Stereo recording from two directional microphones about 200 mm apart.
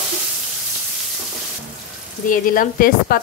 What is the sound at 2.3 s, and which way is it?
Speech, 45° left (ahead or behind).